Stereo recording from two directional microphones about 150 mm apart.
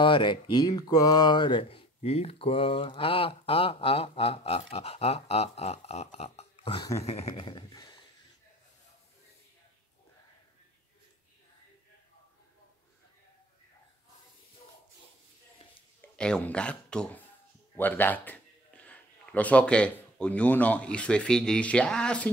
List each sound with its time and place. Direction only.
0.0 s speech: 30° left (ahead or behind)
6.8 s speech: 20° left (ahead or behind)
7.1 s speech: 45° left (ahead or behind)
16.2 s a man's voice: 5° left (ahead or behind)